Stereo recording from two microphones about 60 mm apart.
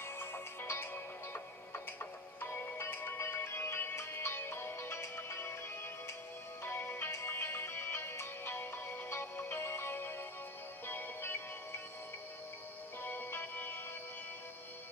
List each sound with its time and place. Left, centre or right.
0.0 s music: left
6.6 s music: left
13.0 s music: left